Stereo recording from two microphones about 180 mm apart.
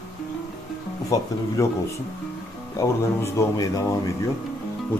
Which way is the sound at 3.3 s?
20° left (ahead or behind).